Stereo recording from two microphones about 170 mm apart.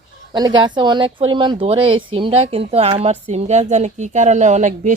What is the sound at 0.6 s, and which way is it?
Speech, 25° right (ahead or behind).